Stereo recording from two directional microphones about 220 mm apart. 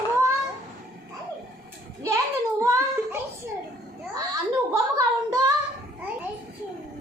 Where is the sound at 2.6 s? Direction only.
15° right (ahead or behind).